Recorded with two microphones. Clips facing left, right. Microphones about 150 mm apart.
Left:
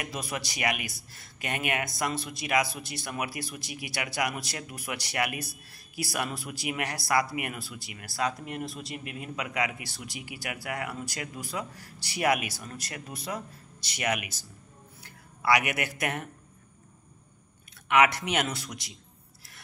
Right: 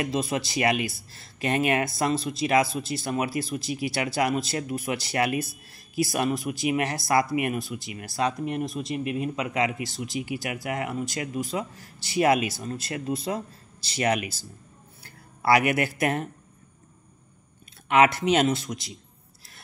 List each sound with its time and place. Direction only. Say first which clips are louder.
0.0 s speech: right 8 dB; 25° right (ahead or behind)
17.8 s speech: right 4 dB; 30° right (ahead or behind)